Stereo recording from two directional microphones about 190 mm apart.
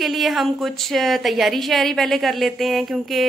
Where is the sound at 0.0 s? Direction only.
Centre (ahead or behind).